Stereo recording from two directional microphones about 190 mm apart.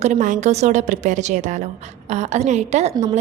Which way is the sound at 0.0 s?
40° right (ahead or behind).